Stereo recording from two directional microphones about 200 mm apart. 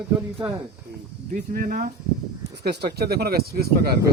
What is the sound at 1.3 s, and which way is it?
Speech, 45° right (ahead or behind).